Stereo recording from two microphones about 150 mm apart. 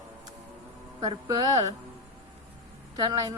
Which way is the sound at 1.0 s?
25° right (ahead or behind).